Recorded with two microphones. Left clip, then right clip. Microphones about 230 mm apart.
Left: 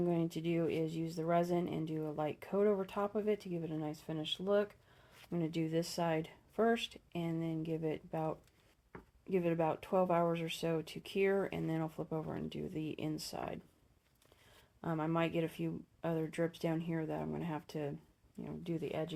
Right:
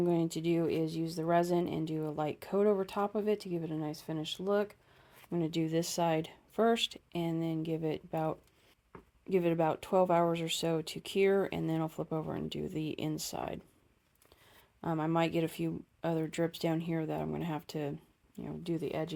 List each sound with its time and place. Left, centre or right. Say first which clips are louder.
0.0 s speech: right 5 dB; right
14.8 s speech: right 4 dB; right